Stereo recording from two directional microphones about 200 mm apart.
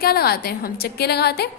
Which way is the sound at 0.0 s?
50° left (ahead or behind).